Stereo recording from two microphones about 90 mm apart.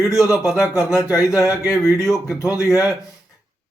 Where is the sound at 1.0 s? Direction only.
35° left (ahead or behind).